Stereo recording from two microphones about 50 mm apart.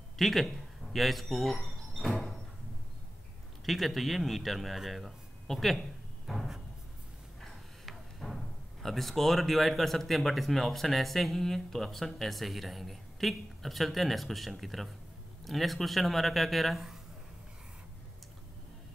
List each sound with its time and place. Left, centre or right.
0.2 s speech: centre
3.6 s speech: centre
6.3 s cupboard open or close: centre
7.8 s music: centre
8.8 s speech: centre